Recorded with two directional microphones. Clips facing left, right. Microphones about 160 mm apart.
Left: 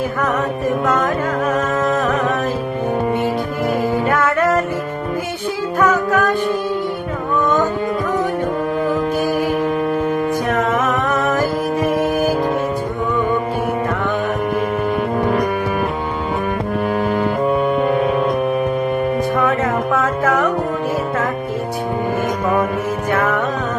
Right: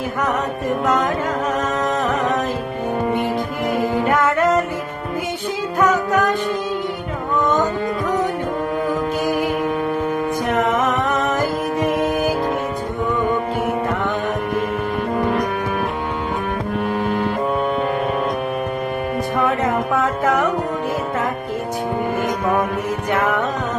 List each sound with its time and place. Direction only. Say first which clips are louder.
1.5 s music: left 3 dB; 20° right (ahead or behind)
3.9 s music: left 1 dB; 20° right (ahead or behind)
5.8 s music: left 1 dB; 20° right (ahead or behind)
9.2 s music: left 2 dB; 15° right (ahead or behind)
10.5 s music: right 2 dB; 20° right (ahead or behind)
19.5 s music: left 2 dB; 20° right (ahead or behind)
23.1 s music: left 1 dB; 15° right (ahead or behind)